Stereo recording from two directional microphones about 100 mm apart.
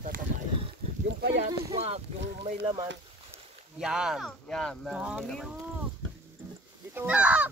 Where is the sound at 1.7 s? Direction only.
90° right.